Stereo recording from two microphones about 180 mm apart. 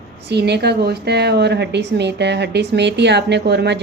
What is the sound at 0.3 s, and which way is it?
A woman's voice, 65° right (ahead or behind).